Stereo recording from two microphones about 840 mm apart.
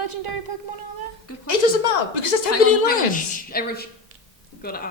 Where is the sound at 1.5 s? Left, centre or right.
Left.